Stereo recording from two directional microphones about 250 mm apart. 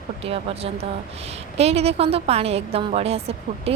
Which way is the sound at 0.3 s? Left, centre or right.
Right.